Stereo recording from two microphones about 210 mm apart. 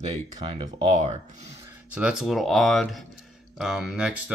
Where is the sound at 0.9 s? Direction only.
35° right (ahead or behind).